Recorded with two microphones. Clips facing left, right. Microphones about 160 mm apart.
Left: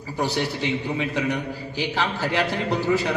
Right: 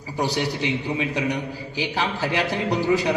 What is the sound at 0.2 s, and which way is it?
A man's voice, 15° right (ahead or behind).